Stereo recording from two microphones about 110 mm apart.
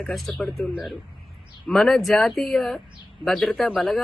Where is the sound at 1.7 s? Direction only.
Centre (ahead or behind).